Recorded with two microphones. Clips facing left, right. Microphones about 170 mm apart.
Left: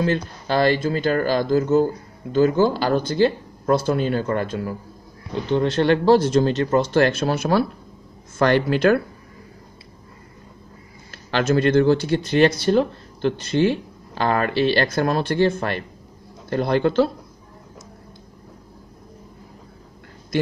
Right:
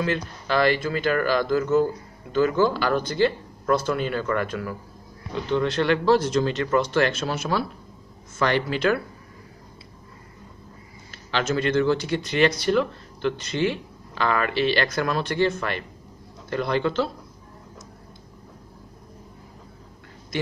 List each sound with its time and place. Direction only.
0.0 s speech: 35° left (ahead or behind)
11.1 s speech: 45° left (ahead or behind)